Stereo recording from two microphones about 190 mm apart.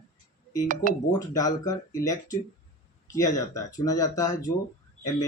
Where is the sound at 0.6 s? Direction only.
40° right (ahead or behind).